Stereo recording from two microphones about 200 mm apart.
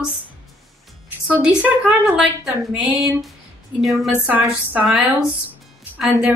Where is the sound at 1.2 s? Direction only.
5° right (ahead or behind).